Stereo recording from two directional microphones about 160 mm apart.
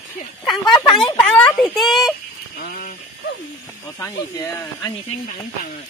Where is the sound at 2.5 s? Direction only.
60° left (ahead or behind).